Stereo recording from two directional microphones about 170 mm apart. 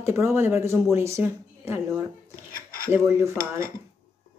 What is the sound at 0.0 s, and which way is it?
Speech, 15° right (ahead or behind).